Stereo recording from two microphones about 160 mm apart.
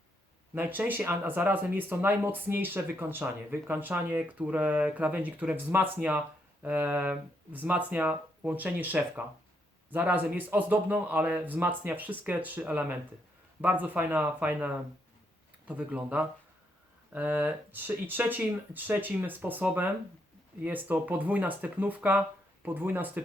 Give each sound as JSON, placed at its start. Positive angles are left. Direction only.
{"t": 0.5, "sound": "speech", "side_deg": -10}